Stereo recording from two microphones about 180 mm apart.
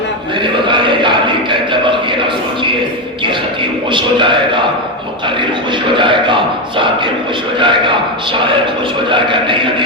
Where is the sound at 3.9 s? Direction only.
25° right (ahead or behind).